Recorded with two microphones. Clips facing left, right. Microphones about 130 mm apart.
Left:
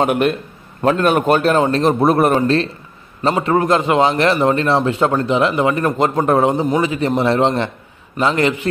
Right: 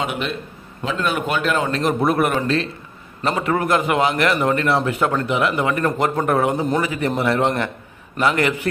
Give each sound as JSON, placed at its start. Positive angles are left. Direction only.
{"t": 0.0, "sound": "a man's voice", "side_deg": 50}
{"t": 1.8, "sound": "a man's voice", "side_deg": 30}